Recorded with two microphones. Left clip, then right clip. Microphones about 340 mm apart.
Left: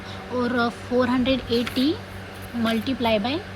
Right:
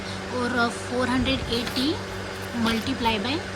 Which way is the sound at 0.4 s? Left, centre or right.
Centre.